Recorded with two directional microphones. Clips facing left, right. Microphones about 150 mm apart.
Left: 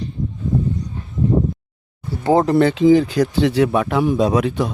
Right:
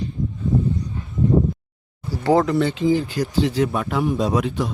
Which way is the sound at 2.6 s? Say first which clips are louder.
Left 6 dB; 75° left (ahead or behind).